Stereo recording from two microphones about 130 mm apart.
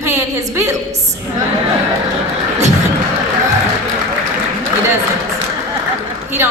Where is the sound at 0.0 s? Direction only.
25° right (ahead or behind).